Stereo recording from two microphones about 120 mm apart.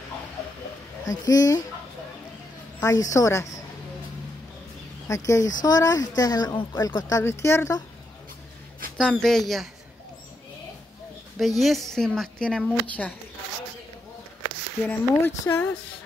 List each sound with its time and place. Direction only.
1.0 s speech: 30° left (ahead or behind)
2.8 s speech: 25° left (ahead or behind)
5.0 s speech: 25° left (ahead or behind)
8.9 s speech: 5° left (ahead or behind)
11.3 s speech: centre (ahead or behind)
14.9 s speech: 20° left (ahead or behind)